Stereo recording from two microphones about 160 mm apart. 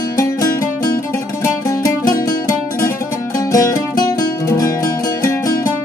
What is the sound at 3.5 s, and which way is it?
Music, 20° left (ahead or behind).